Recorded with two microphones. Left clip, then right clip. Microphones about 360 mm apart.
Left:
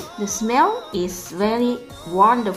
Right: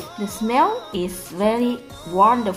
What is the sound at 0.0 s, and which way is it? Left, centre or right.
Speech, centre.